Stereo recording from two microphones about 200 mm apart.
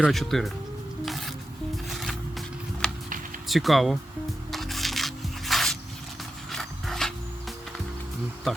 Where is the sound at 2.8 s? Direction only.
5° left (ahead or behind).